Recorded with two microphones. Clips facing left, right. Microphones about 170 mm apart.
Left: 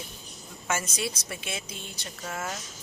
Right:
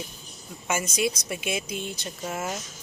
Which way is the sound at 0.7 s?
15° right (ahead or behind).